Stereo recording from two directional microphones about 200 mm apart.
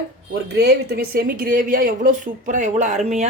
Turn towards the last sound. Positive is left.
turn(degrees=-35)  # may be behind; listen again after turning